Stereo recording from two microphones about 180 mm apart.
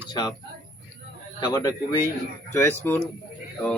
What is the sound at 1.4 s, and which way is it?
A man's voice, 20° left (ahead or behind).